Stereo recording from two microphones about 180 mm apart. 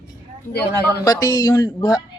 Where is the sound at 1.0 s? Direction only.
20° left (ahead or behind).